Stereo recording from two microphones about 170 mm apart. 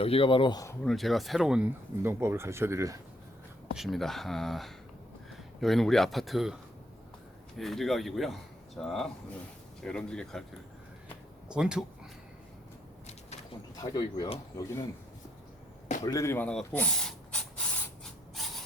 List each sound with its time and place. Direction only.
0.0 s speech: 35° left (ahead or behind)
0.9 s speech: centre (ahead or behind); by 3.0 s 15° right (ahead or behind)
3.8 s speech: centre (ahead or behind)
7.6 s speech: centre (ahead or behind)
11.4 s speech: 5° right (ahead or behind)
13.7 s speech: 25° left (ahead or behind)
16.0 s speech: 15° left (ahead or behind)